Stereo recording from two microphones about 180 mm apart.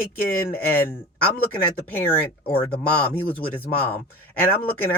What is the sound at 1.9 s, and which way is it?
Speech, 5° left (ahead or behind).